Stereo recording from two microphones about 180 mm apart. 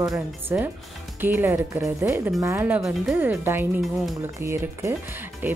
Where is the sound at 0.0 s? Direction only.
15° right (ahead or behind).